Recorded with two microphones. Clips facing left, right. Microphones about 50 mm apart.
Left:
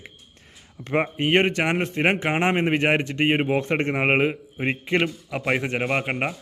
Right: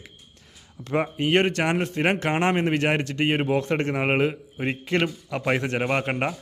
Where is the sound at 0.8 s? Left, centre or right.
Left.